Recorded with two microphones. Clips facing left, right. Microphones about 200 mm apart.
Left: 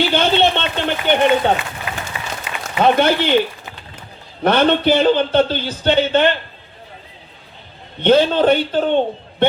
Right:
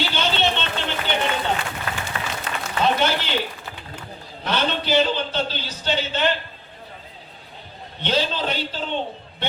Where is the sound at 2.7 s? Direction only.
55° left (ahead or behind).